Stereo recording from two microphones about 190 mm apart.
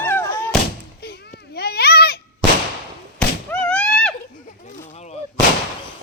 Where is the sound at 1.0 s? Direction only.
55° left (ahead or behind).